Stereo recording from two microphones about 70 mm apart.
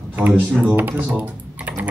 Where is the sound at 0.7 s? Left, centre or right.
Right.